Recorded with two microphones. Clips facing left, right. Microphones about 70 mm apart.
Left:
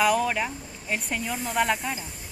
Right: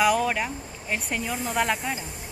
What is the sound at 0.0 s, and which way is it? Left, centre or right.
Speech, centre.